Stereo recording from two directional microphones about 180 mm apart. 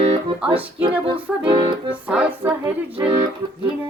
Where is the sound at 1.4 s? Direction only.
25° right (ahead or behind).